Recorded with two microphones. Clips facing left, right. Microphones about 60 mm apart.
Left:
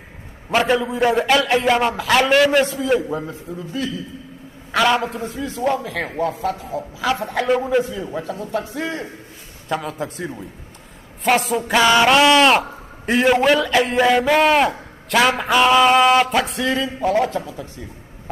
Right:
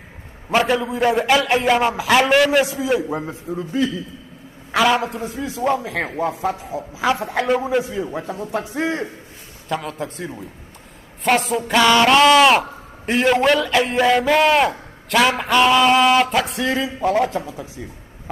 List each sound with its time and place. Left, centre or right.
0.6 s speech: centre
3.1 s speech: right
3.5 s a man's voice: right
4.7 s a man's voice: centre
7.2 s speech: centre
8.2 s a man's voice: right
9.7 s speech: centre